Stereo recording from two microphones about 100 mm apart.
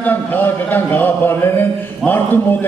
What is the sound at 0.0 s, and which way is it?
A man's voice, 20° left (ahead or behind).